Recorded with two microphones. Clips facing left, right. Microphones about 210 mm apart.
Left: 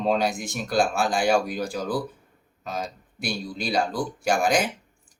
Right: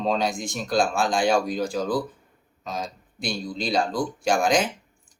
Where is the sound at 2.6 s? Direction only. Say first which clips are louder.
Even; 5° left (ahead or behind).